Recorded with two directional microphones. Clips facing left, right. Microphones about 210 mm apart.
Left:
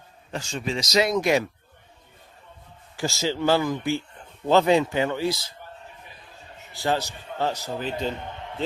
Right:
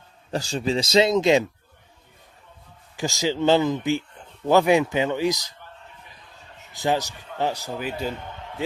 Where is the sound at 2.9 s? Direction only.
15° right (ahead or behind).